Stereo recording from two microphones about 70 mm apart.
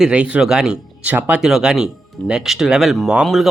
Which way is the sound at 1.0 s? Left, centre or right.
Right.